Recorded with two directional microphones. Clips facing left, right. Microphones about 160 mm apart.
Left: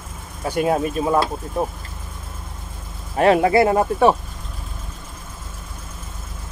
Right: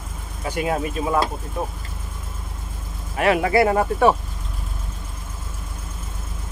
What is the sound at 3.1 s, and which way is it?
Speech, 35° left (ahead or behind).